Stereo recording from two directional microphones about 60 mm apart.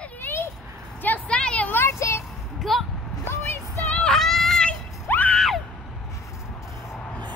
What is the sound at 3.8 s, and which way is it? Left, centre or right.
Child singing, centre.